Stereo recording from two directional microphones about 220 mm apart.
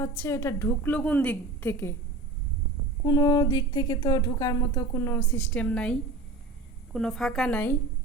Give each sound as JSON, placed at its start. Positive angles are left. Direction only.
{"t": 0.0, "sound": "speech", "side_deg": 10}
{"t": 3.0, "sound": "a woman's voice", "side_deg": 15}